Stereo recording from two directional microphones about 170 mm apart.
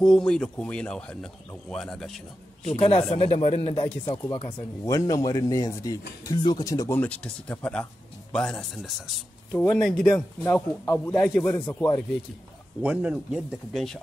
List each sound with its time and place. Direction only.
0.0 s speech: 5° left (ahead or behind)
2.6 s speech: 35° left (ahead or behind)
7.0 s speech: 10° left (ahead or behind)
12.8 s speech: 5° right (ahead or behind)